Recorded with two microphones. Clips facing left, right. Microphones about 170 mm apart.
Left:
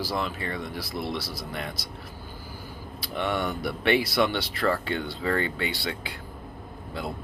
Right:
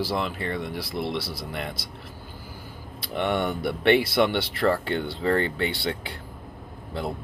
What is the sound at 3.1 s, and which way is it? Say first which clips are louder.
Speech: right 3 dB; 25° right (ahead or behind).